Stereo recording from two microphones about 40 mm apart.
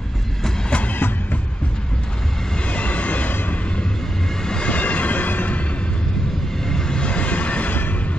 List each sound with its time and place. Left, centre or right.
0.7 s train: left
2.6 s train: left
4.6 s train: left
6.7 s train: centre; by 7.9 s left